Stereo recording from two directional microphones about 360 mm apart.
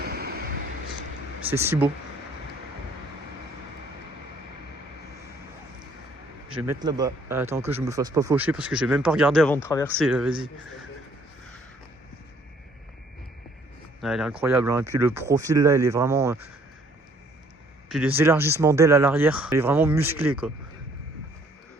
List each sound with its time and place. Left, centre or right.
0.0 s vehicle: right
1.5 s speech: centre
6.7 s speech: centre
14.0 s speech: centre
17.8 s speech: centre